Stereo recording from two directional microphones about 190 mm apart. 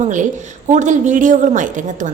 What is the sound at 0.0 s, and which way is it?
A woman's voice, 40° right (ahead or behind).